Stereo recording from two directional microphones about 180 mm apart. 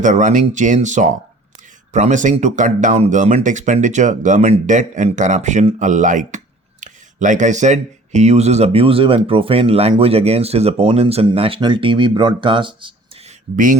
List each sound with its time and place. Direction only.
0.0 s speech: 45° right (ahead or behind); by 13.3 s 25° right (ahead or behind)